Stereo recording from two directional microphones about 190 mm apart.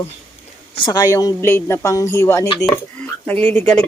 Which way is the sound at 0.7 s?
20° left (ahead or behind).